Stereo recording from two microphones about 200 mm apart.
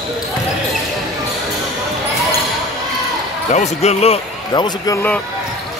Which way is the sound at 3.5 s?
35° left (ahead or behind).